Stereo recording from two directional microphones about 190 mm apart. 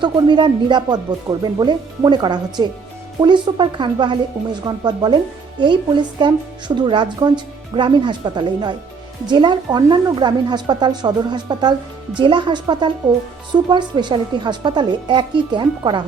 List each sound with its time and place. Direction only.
0.0 s speech: 25° right (ahead or behind)